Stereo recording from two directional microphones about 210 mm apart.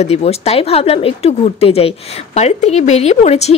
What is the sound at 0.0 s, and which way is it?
Speech, 30° left (ahead or behind).